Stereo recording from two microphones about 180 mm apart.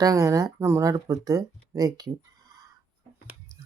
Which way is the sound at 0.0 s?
20° right (ahead or behind).